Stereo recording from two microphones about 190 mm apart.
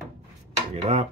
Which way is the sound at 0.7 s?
30° right (ahead or behind).